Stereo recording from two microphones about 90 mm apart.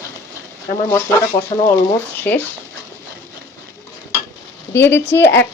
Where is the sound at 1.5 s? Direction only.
90° left.